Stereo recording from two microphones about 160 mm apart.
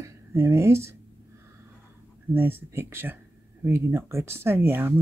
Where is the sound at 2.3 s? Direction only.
15° right (ahead or behind).